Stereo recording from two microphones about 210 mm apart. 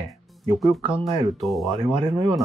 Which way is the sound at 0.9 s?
30° right (ahead or behind).